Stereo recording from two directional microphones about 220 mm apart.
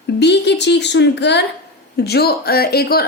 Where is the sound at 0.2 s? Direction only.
50° left (ahead or behind).